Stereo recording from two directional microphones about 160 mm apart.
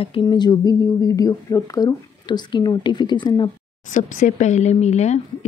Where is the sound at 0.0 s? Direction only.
30° left (ahead or behind).